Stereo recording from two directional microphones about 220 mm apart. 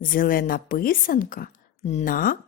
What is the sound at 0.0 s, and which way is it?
A woman's voice, 40° left (ahead or behind).